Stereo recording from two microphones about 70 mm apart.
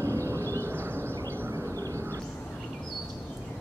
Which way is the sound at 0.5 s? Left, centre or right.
Right.